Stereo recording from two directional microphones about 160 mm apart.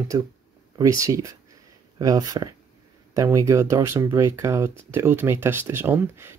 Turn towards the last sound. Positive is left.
turn(degrees=-15)  # may be behind; listen again after turning